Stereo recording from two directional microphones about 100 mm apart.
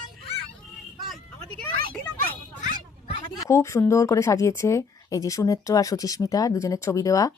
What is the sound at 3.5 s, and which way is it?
A woman's voice, 30° left (ahead or behind).